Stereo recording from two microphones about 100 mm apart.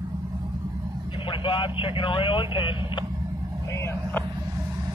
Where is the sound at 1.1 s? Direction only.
55° left (ahead or behind).